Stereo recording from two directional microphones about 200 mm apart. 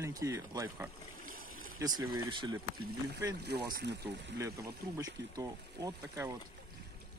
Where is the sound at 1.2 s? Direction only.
45° right (ahead or behind).